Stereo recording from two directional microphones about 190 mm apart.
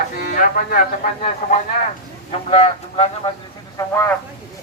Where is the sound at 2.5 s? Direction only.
30° left (ahead or behind).